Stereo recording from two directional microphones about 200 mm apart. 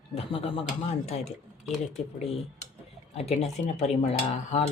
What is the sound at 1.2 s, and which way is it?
Speech, centre (ahead or behind).